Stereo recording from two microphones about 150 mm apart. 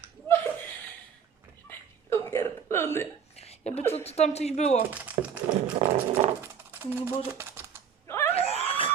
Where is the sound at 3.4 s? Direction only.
45° left (ahead or behind).